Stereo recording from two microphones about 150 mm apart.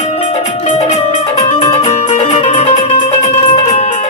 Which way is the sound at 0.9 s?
45° left (ahead or behind).